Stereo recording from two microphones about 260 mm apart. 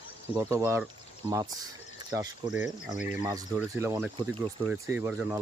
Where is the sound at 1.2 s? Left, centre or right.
Right.